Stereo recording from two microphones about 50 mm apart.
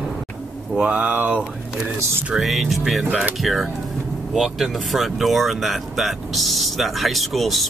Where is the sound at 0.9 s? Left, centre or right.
Right.